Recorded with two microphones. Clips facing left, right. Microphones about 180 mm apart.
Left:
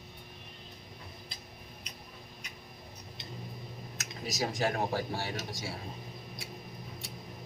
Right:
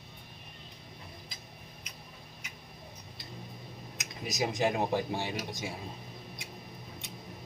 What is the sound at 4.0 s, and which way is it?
Speech, 15° right (ahead or behind).